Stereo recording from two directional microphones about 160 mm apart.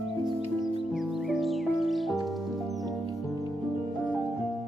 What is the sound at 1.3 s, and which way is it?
Music, centre (ahead or behind).